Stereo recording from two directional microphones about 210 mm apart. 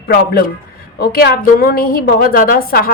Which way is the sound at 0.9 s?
50° left (ahead or behind).